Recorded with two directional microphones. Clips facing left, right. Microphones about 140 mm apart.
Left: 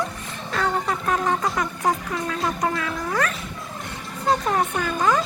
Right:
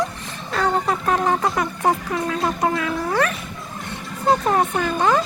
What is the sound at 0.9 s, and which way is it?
Music, 30° right (ahead or behind).